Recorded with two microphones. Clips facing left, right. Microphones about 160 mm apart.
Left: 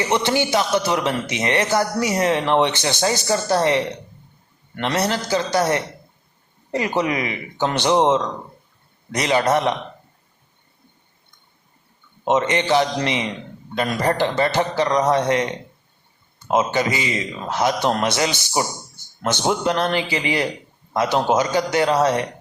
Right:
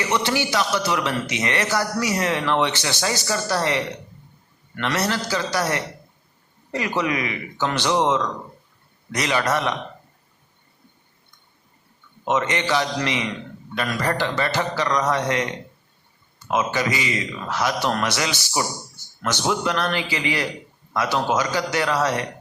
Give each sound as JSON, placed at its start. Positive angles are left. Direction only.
{"t": 0.0, "sound": "a man's voice", "side_deg": 20}
{"t": 12.2, "sound": "a man's voice", "side_deg": 25}